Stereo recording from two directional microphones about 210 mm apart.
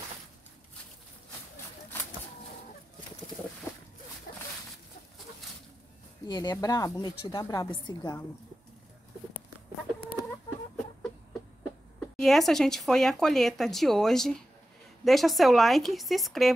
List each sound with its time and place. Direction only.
4.3 s a sound: 40° left (ahead or behind)
6.2 s a woman's voice: 20° left (ahead or behind)
12.2 s speech: centre (ahead or behind)